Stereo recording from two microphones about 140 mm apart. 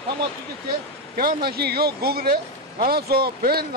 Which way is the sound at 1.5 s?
90° right.